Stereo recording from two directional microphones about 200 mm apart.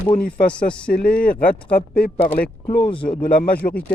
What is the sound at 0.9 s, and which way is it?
Speech, 45° left (ahead or behind).